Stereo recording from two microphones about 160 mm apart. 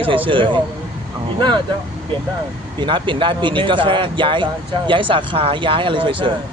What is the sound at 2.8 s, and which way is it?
Speech, 30° right (ahead or behind).